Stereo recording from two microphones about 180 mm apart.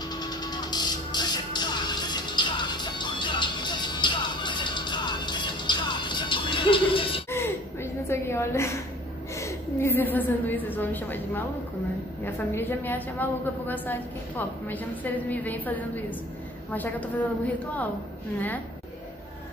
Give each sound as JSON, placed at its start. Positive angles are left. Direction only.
{"t": 0.1, "sound": "music", "side_deg": 20}
{"t": 7.2, "sound": "gasp", "side_deg": 15}
{"t": 9.3, "sound": "a woman's voice", "side_deg": 15}